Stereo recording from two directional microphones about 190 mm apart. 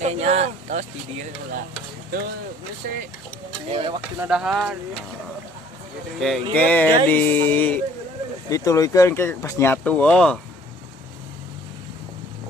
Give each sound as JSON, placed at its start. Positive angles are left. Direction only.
{"t": 0.0, "sound": "speech", "side_deg": -35}
{"t": 2.8, "sound": "speech", "side_deg": -50}
{"t": 3.7, "sound": "speech", "side_deg": -25}
{"t": 4.2, "sound": "speech", "side_deg": -5}
{"t": 6.1, "sound": "speech", "side_deg": 0}